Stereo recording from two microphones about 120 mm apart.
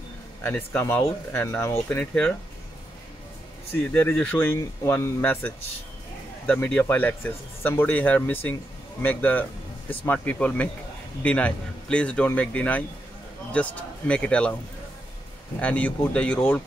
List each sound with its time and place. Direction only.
0.4 s speech: 20° left (ahead or behind)
3.9 s speech: 10° left (ahead or behind)
15.6 s speech: 10° left (ahead or behind)